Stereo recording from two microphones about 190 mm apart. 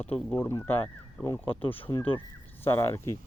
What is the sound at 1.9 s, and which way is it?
Speech, 20° left (ahead or behind).